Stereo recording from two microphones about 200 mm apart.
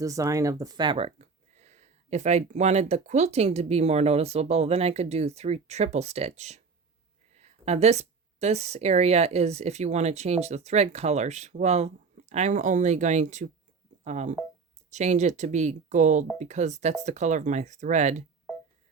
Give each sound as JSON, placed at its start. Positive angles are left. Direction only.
{"t": 0.0, "sound": "speech", "side_deg": -15}